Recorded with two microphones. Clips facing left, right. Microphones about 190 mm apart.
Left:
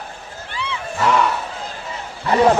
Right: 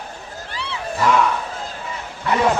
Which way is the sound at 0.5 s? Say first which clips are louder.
Left 3 dB; 35° right (ahead or behind).